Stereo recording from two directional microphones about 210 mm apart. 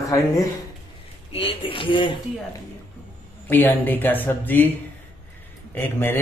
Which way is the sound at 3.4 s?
10° left (ahead or behind).